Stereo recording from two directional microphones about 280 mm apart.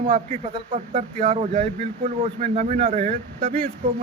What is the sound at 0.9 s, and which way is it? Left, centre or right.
Speech, right.